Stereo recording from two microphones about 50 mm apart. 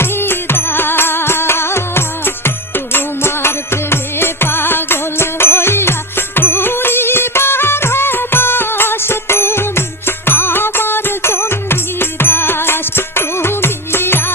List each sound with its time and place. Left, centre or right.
0.0 s music: left